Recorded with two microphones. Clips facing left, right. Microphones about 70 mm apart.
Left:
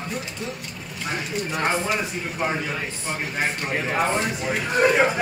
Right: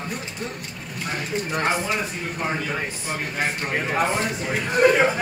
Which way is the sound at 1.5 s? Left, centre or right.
Centre.